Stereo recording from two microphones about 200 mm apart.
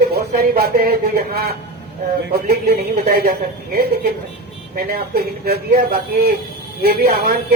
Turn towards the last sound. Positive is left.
turn(degrees=-50)  # may be behind; listen again after turning